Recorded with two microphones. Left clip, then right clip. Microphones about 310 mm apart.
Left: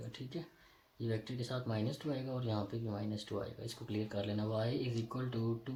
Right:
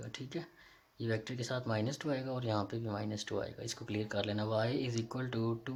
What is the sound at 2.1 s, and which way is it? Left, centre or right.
Speech, right.